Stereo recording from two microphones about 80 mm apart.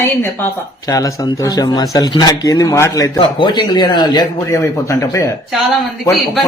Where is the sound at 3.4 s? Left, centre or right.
Left.